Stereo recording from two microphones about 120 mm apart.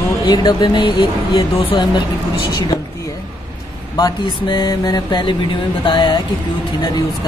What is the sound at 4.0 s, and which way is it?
Speech, 35° left (ahead or behind).